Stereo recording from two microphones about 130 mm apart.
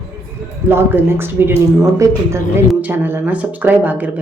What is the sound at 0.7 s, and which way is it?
Speech, 15° right (ahead or behind).